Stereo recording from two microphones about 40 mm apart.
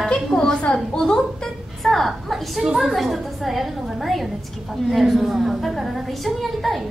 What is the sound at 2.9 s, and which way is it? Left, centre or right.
Child singing, centre.